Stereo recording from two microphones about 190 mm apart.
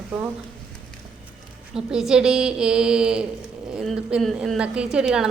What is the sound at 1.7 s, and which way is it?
A woman's voice, 5° right (ahead or behind).